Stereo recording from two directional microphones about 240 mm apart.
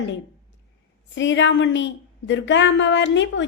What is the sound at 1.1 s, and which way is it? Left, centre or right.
A woman's voice, left.